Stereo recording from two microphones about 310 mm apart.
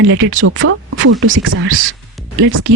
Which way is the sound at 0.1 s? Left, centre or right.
Right.